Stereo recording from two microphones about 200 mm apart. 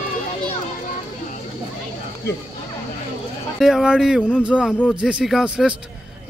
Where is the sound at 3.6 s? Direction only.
Centre (ahead or behind).